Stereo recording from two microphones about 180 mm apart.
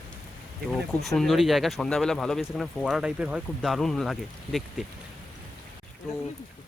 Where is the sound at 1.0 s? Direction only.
Centre (ahead or behind).